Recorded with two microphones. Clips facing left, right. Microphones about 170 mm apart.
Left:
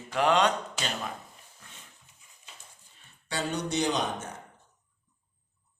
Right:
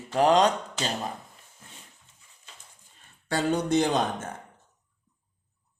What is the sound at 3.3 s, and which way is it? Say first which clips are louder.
Speech: right 7 dB; 50° right (ahead or behind).